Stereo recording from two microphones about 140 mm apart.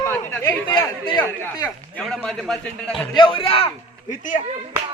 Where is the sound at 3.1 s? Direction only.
40° left (ahead or behind).